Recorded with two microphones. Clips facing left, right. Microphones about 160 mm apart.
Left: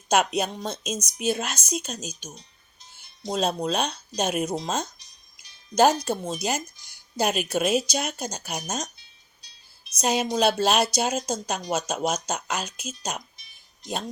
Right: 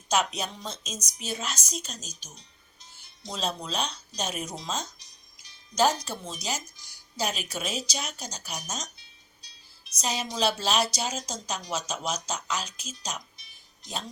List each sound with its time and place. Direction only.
0.1 s a woman's voice: 55° left (ahead or behind)
3.2 s a woman's voice: 50° left (ahead or behind)
10.0 s a woman's voice: 55° left (ahead or behind)